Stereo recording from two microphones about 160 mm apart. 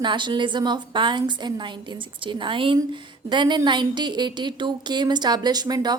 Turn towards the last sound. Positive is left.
turn(degrees=-25)  # may be behind; listen again after turning